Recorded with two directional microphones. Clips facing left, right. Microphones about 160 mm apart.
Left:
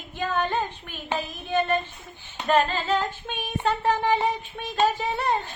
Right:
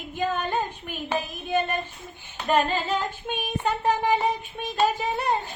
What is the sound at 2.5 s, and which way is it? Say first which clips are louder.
Female singing: left 1 dB; 15° right (ahead or behind).